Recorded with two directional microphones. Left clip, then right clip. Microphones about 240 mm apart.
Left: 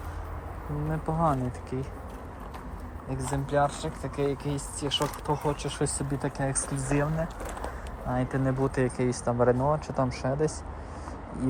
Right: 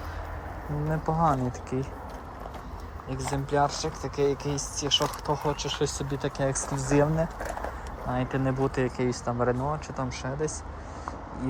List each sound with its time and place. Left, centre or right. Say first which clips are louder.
0.9 s speech: right 2 dB; centre
3.2 s speech: right 1 dB; centre
6.4 s speech: right 3 dB; centre
8.1 s speech: even; centre